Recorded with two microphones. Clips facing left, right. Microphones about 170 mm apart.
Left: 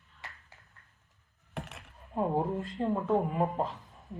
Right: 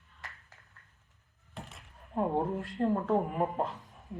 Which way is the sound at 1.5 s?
75° left (ahead or behind).